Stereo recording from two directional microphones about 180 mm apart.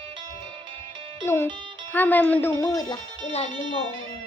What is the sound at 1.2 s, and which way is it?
Speech, 10° left (ahead or behind).